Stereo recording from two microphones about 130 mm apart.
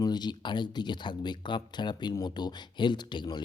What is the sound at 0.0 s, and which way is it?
Speech, 35° left (ahead or behind).